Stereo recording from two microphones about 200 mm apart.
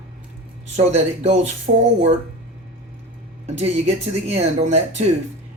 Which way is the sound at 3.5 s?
30° right (ahead or behind).